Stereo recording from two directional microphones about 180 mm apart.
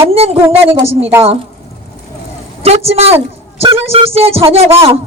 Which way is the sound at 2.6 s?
35° right (ahead or behind).